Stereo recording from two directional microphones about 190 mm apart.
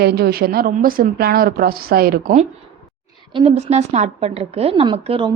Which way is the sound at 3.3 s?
30° right (ahead or behind).